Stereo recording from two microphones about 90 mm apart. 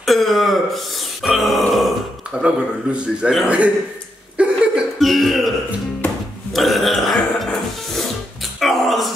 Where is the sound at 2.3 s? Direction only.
10° right (ahead or behind).